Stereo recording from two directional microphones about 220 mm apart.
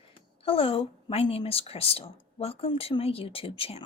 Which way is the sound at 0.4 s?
25° left (ahead or behind).